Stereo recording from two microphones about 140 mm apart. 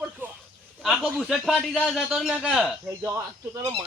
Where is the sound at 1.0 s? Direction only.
Centre (ahead or behind).